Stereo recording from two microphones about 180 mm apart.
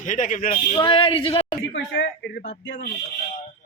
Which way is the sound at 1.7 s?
85° left.